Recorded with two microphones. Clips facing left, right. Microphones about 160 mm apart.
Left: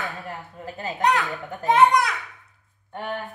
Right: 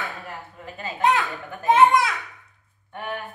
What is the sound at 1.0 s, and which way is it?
A woman's voice, centre (ahead or behind).